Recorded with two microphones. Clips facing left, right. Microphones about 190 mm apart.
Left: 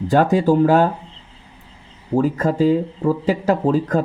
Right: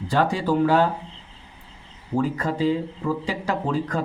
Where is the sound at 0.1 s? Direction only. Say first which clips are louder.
Left 6 dB; 45° left (ahead or behind).